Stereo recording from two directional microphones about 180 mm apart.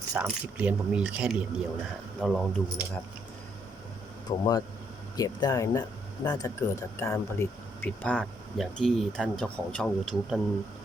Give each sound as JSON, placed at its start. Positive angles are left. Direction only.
{"t": 0.1, "sound": "speech", "side_deg": -5}
{"t": 4.3, "sound": "speech", "side_deg": 20}